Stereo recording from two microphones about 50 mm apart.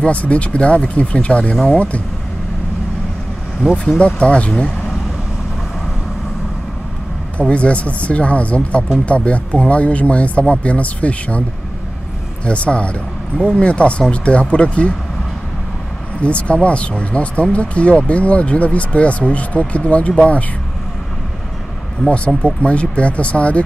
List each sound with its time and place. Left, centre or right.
0.0 s speech: left
3.6 s speech: right
4.0 s speech: left
7.3 s speech: left
12.4 s speech: left
16.2 s speech: left
22.4 s speech: left